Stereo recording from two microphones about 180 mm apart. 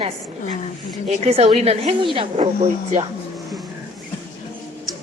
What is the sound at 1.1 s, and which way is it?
Speech, 35° right (ahead or behind).